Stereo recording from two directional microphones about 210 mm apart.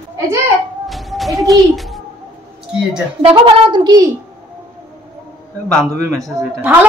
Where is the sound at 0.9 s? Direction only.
Centre (ahead or behind).